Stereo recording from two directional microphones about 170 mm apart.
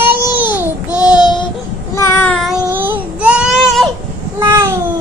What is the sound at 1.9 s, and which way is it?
Child singing, 15° left (ahead or behind).